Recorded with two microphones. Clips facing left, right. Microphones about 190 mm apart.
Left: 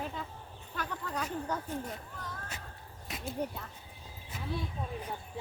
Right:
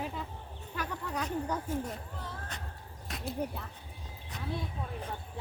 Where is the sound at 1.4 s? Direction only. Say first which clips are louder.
Right 2 dB; 10° right (ahead or behind).